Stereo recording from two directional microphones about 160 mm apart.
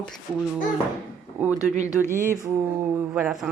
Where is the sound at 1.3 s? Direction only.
10° right (ahead or behind).